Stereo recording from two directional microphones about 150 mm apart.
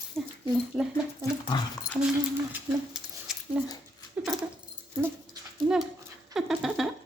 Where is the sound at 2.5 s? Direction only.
5° right (ahead or behind).